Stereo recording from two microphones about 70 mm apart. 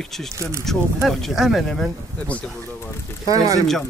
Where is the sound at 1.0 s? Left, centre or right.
Centre.